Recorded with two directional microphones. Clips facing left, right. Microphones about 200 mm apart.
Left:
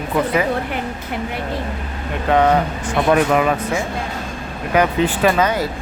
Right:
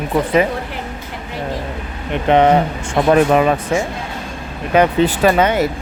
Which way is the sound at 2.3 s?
20° right (ahead or behind).